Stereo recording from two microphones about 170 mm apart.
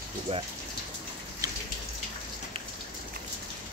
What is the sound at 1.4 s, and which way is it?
Raindrop, 20° right (ahead or behind).